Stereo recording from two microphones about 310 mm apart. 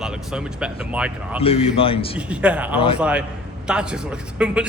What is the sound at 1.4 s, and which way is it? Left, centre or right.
Speech, centre.